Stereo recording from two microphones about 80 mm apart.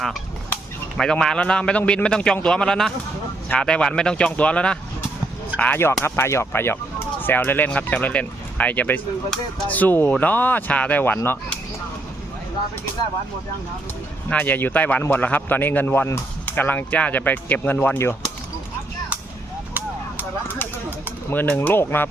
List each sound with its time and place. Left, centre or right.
0.9 s speech: centre
14.3 s speech: left
21.2 s speech: left